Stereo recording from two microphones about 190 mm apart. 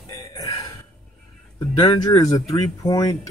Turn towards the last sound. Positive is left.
turn(degrees=20)  # may be behind; listen again after turning